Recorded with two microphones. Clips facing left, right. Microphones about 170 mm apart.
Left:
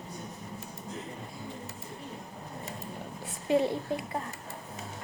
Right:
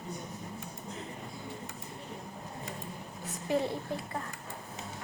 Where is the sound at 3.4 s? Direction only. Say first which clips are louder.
Left 4 dB; 20° left (ahead or behind).